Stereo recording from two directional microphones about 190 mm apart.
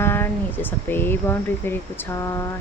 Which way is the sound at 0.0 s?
10° left (ahead or behind).